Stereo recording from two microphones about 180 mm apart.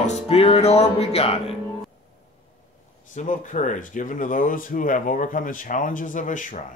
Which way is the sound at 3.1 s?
45° left (ahead or behind).